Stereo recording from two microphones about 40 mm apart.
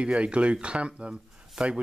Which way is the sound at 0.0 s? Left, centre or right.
Right.